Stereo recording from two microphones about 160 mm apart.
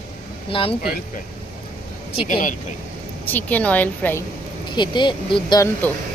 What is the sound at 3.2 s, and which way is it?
A woman's voice, 10° left (ahead or behind).